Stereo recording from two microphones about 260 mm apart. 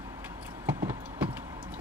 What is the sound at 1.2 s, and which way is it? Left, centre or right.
Clip-clop, centre.